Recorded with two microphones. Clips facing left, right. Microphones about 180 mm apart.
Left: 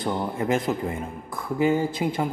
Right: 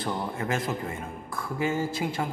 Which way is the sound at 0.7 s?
5° left (ahead or behind).